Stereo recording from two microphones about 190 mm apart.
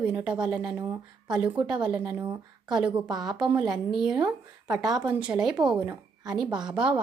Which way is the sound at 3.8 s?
Centre (ahead or behind).